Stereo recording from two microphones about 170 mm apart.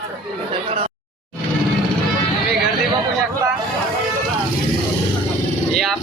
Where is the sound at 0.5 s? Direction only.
35° right (ahead or behind).